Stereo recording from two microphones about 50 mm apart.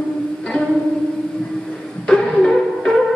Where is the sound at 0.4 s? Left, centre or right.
Centre.